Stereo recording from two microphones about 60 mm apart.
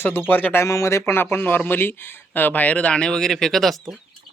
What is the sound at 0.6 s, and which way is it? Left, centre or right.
Speech, left.